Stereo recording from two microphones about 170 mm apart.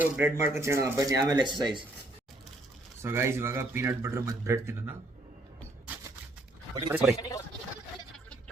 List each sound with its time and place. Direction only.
0.0 s speech: 15° right (ahead or behind)
3.0 s speech: 15° right (ahead or behind)
6.9 s a man's voice: 5° right (ahead or behind)
7.2 s speech: 20° left (ahead or behind)